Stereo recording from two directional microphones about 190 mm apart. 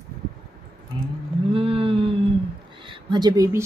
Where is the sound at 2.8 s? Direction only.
25° right (ahead or behind).